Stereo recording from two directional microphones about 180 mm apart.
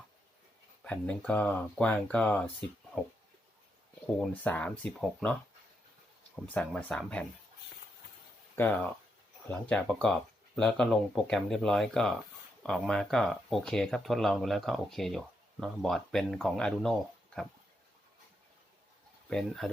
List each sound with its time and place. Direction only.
0.9 s speech: 5° left (ahead or behind)
4.0 s speech: 5° left (ahead or behind)
8.5 s speech: 10° left (ahead or behind)
19.3 s speech: centre (ahead or behind)